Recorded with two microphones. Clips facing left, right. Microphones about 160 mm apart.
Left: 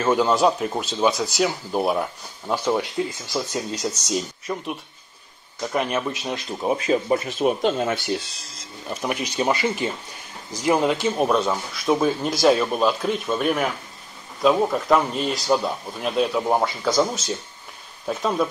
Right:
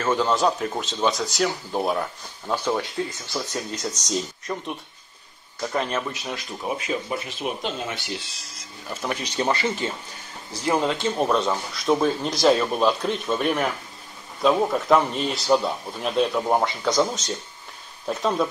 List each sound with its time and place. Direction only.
0.0 s speech: 10° left (ahead or behind)
4.1 s speech: 5° left (ahead or behind); by 6.7 s 20° left (ahead or behind)
6.9 s speech: 45° left (ahead or behind)
8.8 s speech: 15° left (ahead or behind)